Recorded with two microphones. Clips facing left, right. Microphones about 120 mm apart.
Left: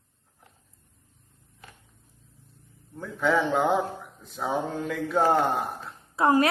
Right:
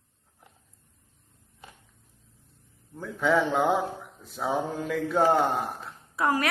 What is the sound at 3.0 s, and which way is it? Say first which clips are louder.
Speech: even; centre (ahead or behind).